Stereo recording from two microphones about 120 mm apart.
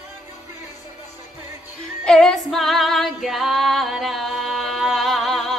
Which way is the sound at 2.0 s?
5° left (ahead or behind).